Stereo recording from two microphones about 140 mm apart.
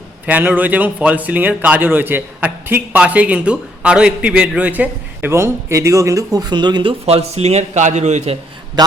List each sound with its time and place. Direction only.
0.3 s a man's voice: 10° right (ahead or behind); by 6.9 s 30° right (ahead or behind)
7.0 s a man's voice: 45° right (ahead or behind)